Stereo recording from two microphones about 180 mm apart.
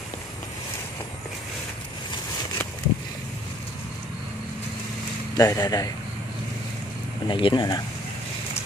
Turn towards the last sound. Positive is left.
turn(degrees=25)  # may be behind; listen again after turning